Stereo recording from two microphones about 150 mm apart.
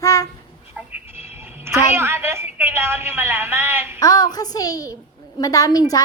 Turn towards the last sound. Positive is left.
turn(degrees=25)  # may be behind; listen again after turning